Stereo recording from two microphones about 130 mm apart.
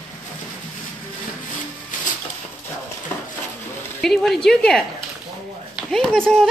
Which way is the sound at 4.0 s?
5° left (ahead or behind).